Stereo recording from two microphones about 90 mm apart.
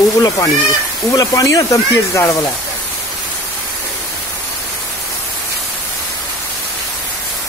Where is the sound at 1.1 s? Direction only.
40° left (ahead or behind).